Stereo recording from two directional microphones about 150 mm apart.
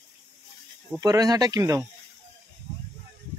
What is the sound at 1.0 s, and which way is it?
Speech, 25° right (ahead or behind).